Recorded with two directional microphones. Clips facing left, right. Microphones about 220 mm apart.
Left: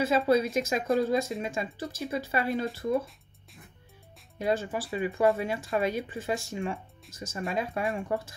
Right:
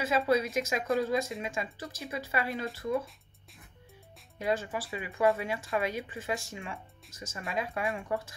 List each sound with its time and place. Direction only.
0.0 s speech: 30° left (ahead or behind)
4.4 s speech: 30° left (ahead or behind)